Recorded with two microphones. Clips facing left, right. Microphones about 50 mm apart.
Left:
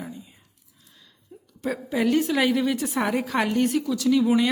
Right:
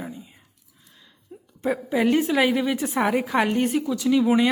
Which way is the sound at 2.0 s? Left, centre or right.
Right.